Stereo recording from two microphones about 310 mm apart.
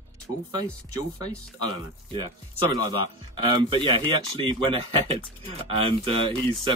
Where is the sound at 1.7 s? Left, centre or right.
Centre.